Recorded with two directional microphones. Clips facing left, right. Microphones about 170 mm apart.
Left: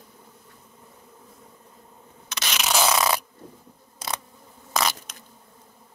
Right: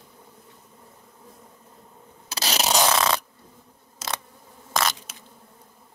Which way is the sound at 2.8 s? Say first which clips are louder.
Left 1 dB; 10° left (ahead or behind).